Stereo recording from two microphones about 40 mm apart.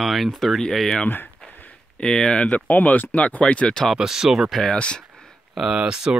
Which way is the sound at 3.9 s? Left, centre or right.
Centre.